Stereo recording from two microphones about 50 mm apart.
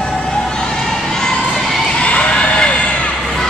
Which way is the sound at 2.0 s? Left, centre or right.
Left.